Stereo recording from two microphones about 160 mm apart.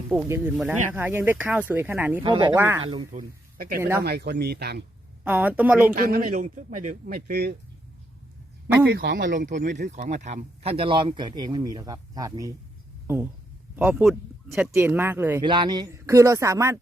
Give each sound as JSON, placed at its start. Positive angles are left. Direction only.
{"t": 0.3, "sound": "speech", "side_deg": -15}
{"t": 2.2, "sound": "speech", "side_deg": -30}
{"t": 2.6, "sound": "speech", "side_deg": -15}
{"t": 2.8, "sound": "a man's voice", "side_deg": -30}
{"t": 3.1, "sound": "speech", "side_deg": -60}
{"t": 3.8, "sound": "speech", "side_deg": -15}
{"t": 4.0, "sound": "speech", "side_deg": -85}
{"t": 5.2, "sound": "speech", "side_deg": -10}
{"t": 5.9, "sound": "a man's voice", "side_deg": -65}
{"t": 7.1, "sound": "speech", "side_deg": -75}
{"t": 9.0, "sound": "a man's voice", "side_deg": -65}
{"t": 13.7, "sound": "speech", "side_deg": -5}
{"t": 14.8, "sound": "speech", "side_deg": -15}
{"t": 15.4, "sound": "speech", "side_deg": -30}